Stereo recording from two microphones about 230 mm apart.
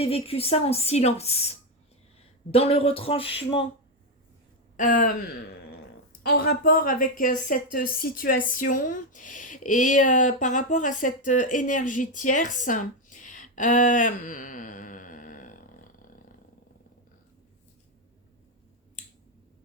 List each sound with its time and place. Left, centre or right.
0.0 s a woman's voice: left
2.5 s a woman's voice: left
4.8 s a woman's voice: left